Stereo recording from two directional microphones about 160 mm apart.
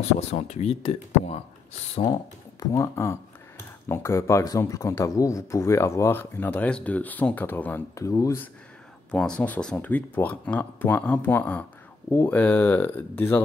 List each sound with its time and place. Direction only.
0.0 s speech: 45° left (ahead or behind)
2.6 s speech: 15° left (ahead or behind)
9.1 s speech: 5° left (ahead or behind)